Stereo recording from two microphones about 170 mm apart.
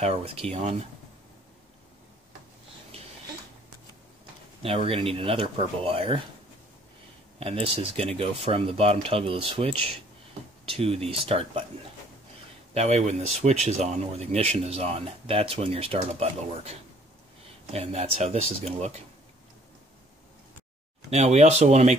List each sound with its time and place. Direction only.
0.0 s speech: 35° right (ahead or behind)
4.6 s speech: 35° right (ahead or behind)
7.3 s speech: 35° right (ahead or behind)
12.7 s speech: 40° right (ahead or behind)
17.7 s speech: 40° right (ahead or behind)
21.1 s speech: 40° right (ahead or behind)